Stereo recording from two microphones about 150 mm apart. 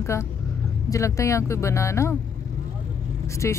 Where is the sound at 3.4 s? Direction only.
20° left (ahead or behind).